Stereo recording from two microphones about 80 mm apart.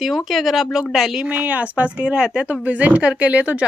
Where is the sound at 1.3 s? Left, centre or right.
Centre.